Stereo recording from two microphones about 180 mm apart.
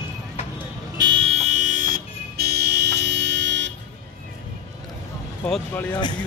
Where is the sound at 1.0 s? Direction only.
30° right (ahead or behind); by 3.7 s 80° right.